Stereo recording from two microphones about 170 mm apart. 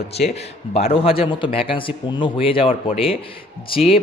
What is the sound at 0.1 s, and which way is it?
A man's voice, 35° left (ahead or behind).